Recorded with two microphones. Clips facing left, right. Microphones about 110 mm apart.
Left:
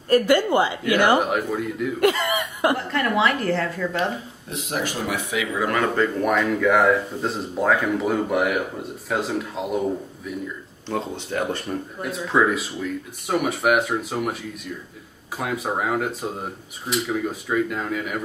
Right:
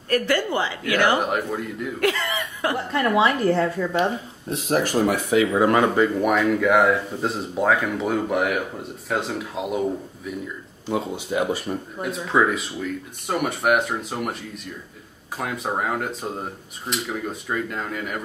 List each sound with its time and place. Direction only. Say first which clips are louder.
0.1 s a woman's voice: left 4 dB; 15° left (ahead or behind)
1.2 s speech: left 1 dB; centre (ahead or behind)
2.0 s cough: left 3 dB; 15° left (ahead or behind)
2.9 s a woman's voice: right 2 dB; 20° right (ahead or behind)
4.5 s speech: right 5 dB; 45° right (ahead or behind); by 5.9 s 25° right (ahead or behind)
5.9 s speech: right 1 dB; 5° right (ahead or behind)